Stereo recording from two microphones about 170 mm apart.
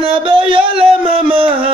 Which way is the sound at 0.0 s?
30° right (ahead or behind).